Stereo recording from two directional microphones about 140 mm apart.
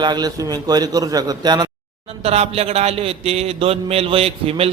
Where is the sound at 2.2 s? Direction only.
45° right (ahead or behind).